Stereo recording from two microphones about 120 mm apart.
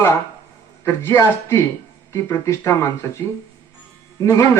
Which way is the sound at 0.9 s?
20° left (ahead or behind).